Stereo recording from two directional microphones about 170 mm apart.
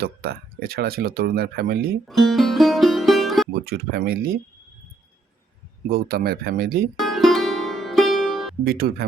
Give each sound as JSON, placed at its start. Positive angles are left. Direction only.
{"t": 0.0, "sound": "speech", "side_deg": -65}
{"t": 2.0, "sound": "music", "side_deg": 0}
{"t": 3.7, "sound": "speech", "side_deg": -65}
{"t": 5.9, "sound": "speech", "side_deg": -60}
{"t": 7.0, "sound": "music", "side_deg": 0}
{"t": 8.6, "sound": "speech", "side_deg": -60}